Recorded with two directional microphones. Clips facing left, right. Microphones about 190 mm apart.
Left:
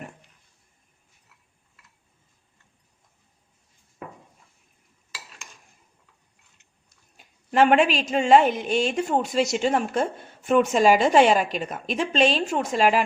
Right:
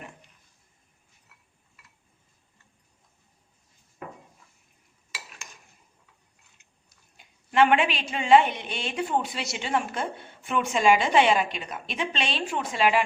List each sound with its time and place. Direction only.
7.5 s a woman's voice: 40° left (ahead or behind)